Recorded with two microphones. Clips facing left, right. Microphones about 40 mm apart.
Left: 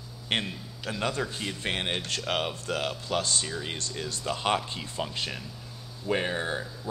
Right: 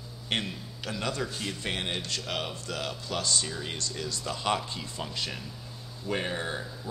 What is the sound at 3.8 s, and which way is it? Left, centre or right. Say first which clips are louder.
Speech: even; left.